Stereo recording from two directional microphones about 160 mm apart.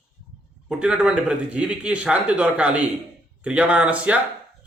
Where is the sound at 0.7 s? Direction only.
5° right (ahead or behind).